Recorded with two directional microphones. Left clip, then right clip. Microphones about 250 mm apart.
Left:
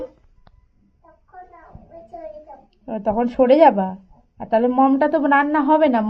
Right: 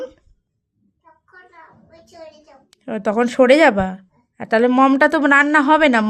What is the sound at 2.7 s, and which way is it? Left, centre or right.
Speech, right.